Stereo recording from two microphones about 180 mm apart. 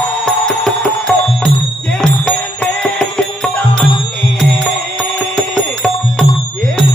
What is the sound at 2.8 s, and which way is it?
Music, 5° left (ahead or behind).